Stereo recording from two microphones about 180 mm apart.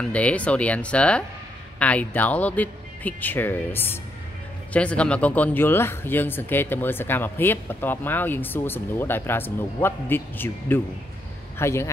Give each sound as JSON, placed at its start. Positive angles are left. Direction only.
{"t": 0.0, "sound": "a man's voice", "side_deg": 5}